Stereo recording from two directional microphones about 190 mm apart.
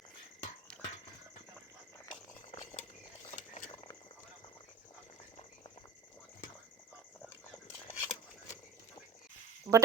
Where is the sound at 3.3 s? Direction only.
40° left (ahead or behind).